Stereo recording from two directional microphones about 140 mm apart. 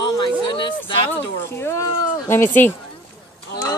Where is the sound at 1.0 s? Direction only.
15° left (ahead or behind).